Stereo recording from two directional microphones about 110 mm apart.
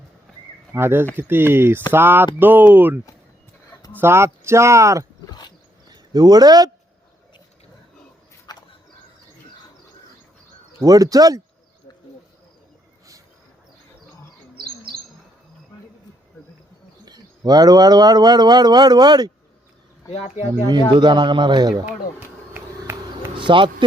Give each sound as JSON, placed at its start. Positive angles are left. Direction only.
{"t": 0.7, "sound": "speech", "side_deg": -20}
{"t": 4.0, "sound": "speech", "side_deg": -25}
{"t": 5.3, "sound": "a sound", "side_deg": 40}
{"t": 5.9, "sound": "speech", "side_deg": -35}
{"t": 8.5, "sound": "a sound", "side_deg": 40}
{"t": 10.8, "sound": "speech", "side_deg": -35}
{"t": 17.1, "sound": "speech", "side_deg": -35}
{"t": 20.1, "sound": "speech", "side_deg": 75}
{"t": 20.9, "sound": "a man's voice", "side_deg": -45}
{"t": 22.5, "sound": "a sound", "side_deg": -20}
{"t": 23.4, "sound": "speech", "side_deg": -45}